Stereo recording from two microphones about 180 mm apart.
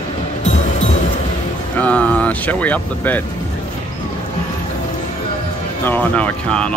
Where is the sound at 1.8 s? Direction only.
5° left (ahead or behind).